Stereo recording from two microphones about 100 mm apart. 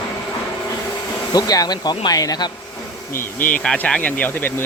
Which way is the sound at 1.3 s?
40° left (ahead or behind).